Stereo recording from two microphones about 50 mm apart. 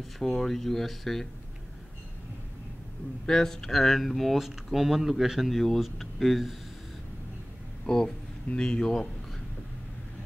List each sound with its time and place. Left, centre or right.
0.2 s speech: centre
3.3 s speech: centre
5.5 s speech: centre
7.8 s speech: centre